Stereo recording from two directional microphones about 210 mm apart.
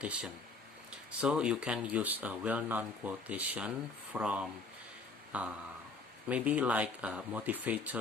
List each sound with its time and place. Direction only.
0.0 s speech: 5° right (ahead or behind)